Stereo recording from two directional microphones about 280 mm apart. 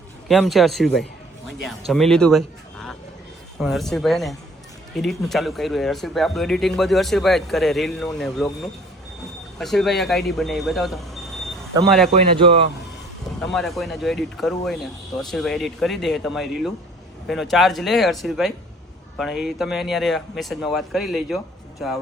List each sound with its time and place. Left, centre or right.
0.3 s speech: centre
9.6 s speech: centre
12.1 s speech: right
13.4 s speech: centre